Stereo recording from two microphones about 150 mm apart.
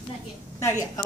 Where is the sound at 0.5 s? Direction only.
20° left (ahead or behind).